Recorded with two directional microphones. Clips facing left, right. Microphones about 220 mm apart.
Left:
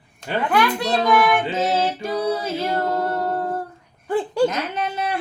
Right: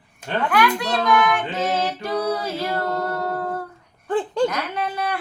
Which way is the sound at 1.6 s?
25° left (ahead or behind).